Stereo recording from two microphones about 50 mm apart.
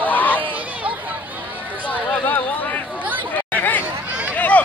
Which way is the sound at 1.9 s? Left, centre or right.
Left.